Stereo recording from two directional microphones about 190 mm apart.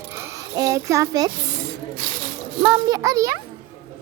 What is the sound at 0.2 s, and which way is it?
A child's voice, 15° right (ahead or behind).